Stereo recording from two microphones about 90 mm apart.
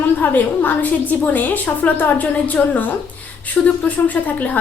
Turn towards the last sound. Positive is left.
turn(degrees=20)  # may be behind; listen again after turning